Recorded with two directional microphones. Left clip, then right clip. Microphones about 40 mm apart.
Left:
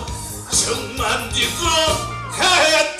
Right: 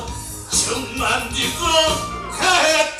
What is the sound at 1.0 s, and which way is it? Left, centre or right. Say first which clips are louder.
Music: even; left.